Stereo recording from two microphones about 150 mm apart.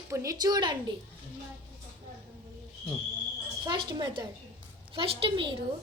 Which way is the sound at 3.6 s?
30° right (ahead or behind).